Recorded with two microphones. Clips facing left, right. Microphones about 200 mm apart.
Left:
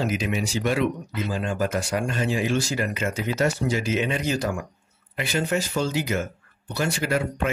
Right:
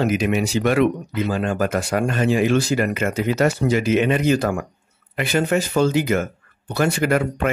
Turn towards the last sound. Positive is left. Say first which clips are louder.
# right 6 dB
turn(degrees=-60)  # may be behind; listen again after turning